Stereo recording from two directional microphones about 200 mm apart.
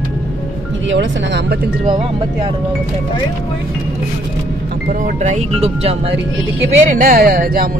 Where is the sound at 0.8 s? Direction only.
65° right (ahead or behind).